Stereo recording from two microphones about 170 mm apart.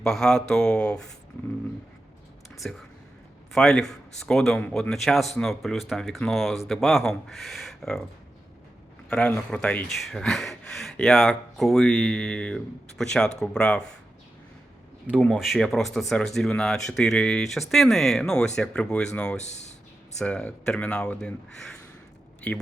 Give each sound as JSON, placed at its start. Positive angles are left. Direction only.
{"t": 0.0, "sound": "speech", "side_deg": 5}
{"t": 2.6, "sound": "speech", "side_deg": 5}
{"t": 9.0, "sound": "speech", "side_deg": 5}
{"t": 15.2, "sound": "speech", "side_deg": 0}
{"t": 19.4, "sound": "speech", "side_deg": 40}
{"t": 20.1, "sound": "speech", "side_deg": 5}